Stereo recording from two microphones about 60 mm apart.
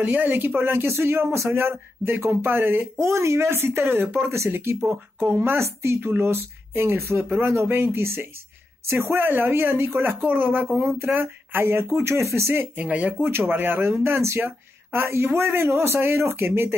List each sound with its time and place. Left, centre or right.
0.0 s speech: right
10.2 s speech: right
12.7 s speech: right